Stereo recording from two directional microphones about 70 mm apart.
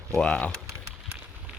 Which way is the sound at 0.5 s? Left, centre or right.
Right.